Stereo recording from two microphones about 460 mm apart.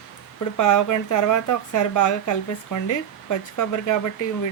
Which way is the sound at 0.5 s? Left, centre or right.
Left.